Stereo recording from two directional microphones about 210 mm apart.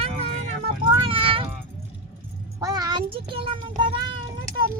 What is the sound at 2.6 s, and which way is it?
A child's voice, 15° right (ahead or behind).